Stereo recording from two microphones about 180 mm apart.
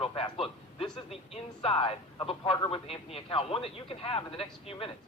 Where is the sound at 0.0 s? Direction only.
30° left (ahead or behind).